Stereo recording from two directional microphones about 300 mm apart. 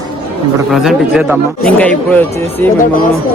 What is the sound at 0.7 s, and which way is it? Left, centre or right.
A man's voice, centre.